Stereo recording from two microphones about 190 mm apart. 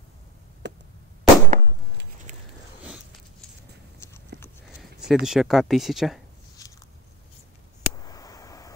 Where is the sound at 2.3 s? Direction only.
40° right (ahead or behind).